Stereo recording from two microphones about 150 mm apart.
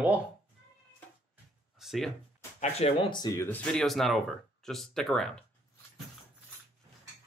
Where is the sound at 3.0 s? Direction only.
30° left (ahead or behind).